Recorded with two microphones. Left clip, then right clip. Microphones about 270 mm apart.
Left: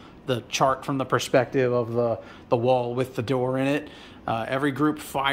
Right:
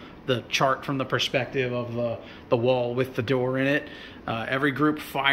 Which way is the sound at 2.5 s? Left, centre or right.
Centre.